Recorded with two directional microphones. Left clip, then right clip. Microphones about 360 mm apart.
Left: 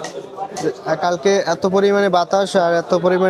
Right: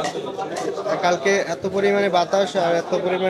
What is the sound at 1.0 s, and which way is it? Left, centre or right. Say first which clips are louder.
Speech: left 3 dB; left.